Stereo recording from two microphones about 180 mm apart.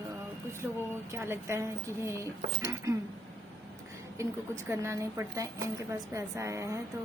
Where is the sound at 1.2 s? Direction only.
15° right (ahead or behind).